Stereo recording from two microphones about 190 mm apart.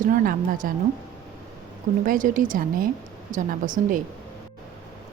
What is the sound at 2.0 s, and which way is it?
Speech, 45° right (ahead or behind).